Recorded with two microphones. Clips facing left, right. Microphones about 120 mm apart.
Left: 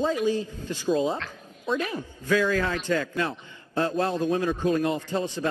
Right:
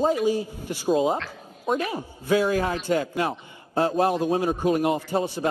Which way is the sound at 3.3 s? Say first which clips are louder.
Right 3 dB; 35° right (ahead or behind).